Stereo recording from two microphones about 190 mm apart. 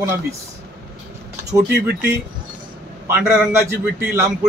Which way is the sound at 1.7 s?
60° right (ahead or behind).